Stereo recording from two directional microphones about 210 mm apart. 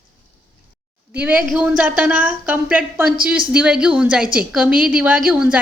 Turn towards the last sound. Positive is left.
turn(degrees=-5)  # may be behind; listen again after turning